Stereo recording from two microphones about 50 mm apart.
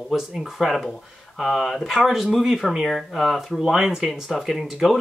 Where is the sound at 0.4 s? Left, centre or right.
Centre.